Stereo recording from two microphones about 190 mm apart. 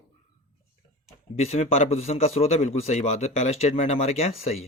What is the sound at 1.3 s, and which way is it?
A man's voice, 35° left (ahead or behind).